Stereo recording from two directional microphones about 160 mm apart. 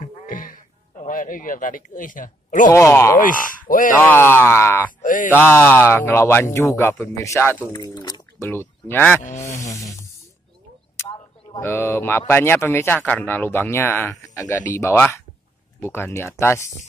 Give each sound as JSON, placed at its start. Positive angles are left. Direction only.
{"t": 0.0, "sound": "music", "side_deg": 60}
{"t": 2.7, "sound": "speech", "side_deg": 15}
{"t": 3.2, "sound": "speech", "side_deg": 60}
{"t": 4.0, "sound": "speech", "side_deg": 15}
{"t": 5.0, "sound": "a sound", "side_deg": 55}
{"t": 5.3, "sound": "speech", "side_deg": 15}
{"t": 7.7, "sound": "a sound", "side_deg": 25}
{"t": 8.5, "sound": "speech", "side_deg": 15}
{"t": 9.7, "sound": "a sound", "side_deg": 20}
{"t": 11.6, "sound": "speech", "side_deg": 15}